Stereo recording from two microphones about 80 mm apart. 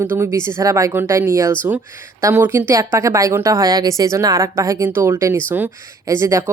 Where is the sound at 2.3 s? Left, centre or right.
Right.